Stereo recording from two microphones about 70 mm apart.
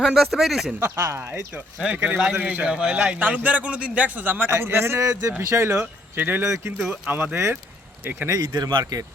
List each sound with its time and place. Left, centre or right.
0.0 s speech: centre
0.8 s a man's voice: right
1.8 s a man's voice: centre
2.6 s a man's voice: centre; by 6.7 s right
7.1 s a man's voice: right
8.4 s speech: right
8.8 s speech: right